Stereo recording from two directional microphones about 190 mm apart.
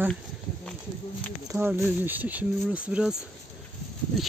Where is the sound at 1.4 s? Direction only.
15° right (ahead or behind).